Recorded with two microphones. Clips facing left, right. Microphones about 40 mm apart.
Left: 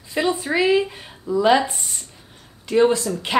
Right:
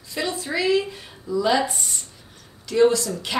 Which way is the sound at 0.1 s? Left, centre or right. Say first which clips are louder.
Left 5 dB; left.